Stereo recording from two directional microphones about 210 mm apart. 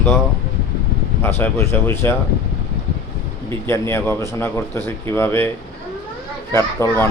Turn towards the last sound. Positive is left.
turn(degrees=10)  # may be behind; listen again after turning